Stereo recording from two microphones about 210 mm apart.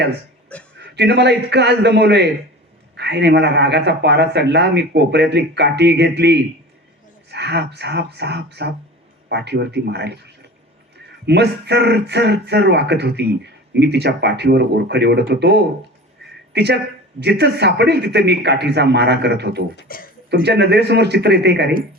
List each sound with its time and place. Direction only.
0.8 s speech: 55° right (ahead or behind)
11.3 s a woman's voice: 55° right (ahead or behind)
19.7 s speech: 45° left (ahead or behind)
20.3 s speech: 55° right (ahead or behind)